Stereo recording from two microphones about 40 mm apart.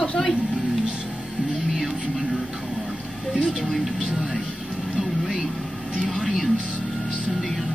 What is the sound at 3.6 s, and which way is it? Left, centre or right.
Speech, centre.